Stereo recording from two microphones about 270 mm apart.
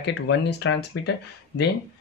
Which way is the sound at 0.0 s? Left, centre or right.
Left.